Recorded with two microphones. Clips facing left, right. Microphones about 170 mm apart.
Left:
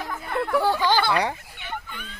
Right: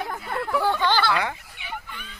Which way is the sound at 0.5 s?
5° left (ahead or behind).